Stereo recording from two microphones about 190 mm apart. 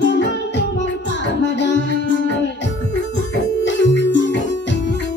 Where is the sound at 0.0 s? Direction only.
70° left (ahead or behind).